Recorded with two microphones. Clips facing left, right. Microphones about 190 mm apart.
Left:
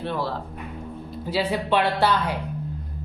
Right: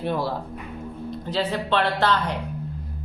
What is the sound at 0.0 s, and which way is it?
Speech, 15° right (ahead or behind).